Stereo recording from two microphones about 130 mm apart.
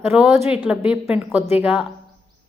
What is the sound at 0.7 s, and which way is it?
A woman's voice, 10° right (ahead or behind).